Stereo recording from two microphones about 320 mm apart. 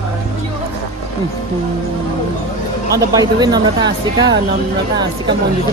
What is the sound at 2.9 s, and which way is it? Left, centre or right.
Speech, centre.